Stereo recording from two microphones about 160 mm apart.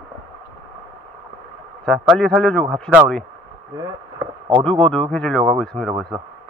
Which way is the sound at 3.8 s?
20° right (ahead or behind).